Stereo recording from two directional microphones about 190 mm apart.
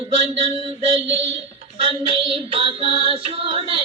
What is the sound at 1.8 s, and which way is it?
Child singing, 25° right (ahead or behind).